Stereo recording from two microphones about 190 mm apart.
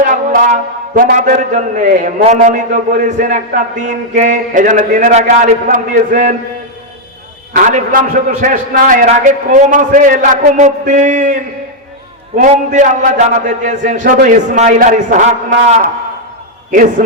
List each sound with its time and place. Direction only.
0.0 s a man's voice: 40° right (ahead or behind)
7.9 s a man's voice: 45° right (ahead or behind)
12.4 s a man's voice: 40° right (ahead or behind)